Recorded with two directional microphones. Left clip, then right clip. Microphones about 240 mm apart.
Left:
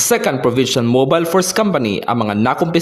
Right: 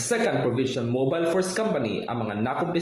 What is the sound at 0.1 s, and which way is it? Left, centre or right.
A man's voice, left.